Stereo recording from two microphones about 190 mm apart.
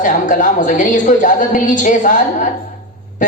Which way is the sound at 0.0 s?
40° left (ahead or behind).